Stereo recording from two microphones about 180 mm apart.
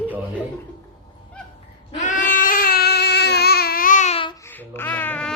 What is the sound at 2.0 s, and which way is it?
Baby cry, 45° left (ahead or behind).